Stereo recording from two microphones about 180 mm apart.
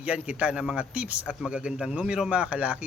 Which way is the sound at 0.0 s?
5° right (ahead or behind).